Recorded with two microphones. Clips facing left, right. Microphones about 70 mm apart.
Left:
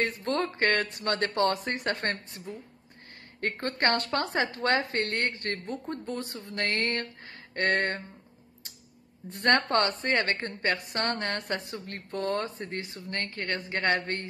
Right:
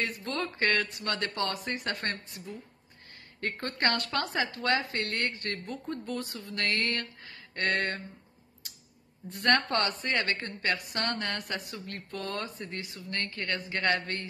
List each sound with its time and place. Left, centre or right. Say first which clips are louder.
0.0 s a woman's voice: left 5 dB; left
3.6 s a woman's voice: left 3 dB; left
9.3 s a woman's voice: left 2 dB; left